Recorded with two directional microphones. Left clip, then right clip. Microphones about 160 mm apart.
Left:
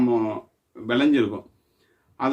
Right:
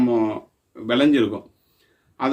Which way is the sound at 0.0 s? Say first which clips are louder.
Right 2 dB; 15° right (ahead or behind).